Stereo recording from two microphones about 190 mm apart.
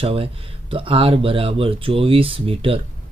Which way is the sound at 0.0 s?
30° right (ahead or behind).